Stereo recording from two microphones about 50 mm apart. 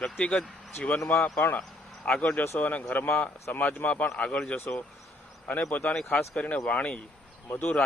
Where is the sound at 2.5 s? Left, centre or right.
Left.